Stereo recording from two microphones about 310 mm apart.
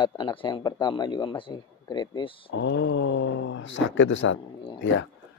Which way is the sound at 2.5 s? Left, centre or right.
Left.